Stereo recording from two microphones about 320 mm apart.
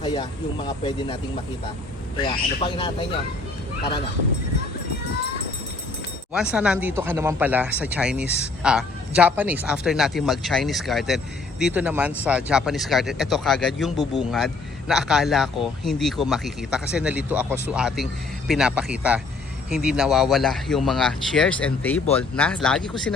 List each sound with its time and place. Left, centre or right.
0.0 s speech: centre
6.3 s speech: centre